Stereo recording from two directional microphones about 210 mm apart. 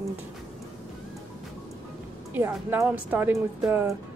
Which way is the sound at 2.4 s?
10° right (ahead or behind).